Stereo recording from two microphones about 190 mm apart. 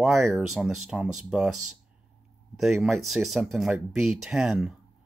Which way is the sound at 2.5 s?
Centre (ahead or behind).